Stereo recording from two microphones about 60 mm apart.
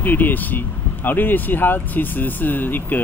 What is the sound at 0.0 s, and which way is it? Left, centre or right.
Speech, left.